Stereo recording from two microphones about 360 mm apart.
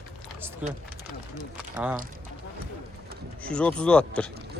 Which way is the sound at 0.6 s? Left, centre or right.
Centre.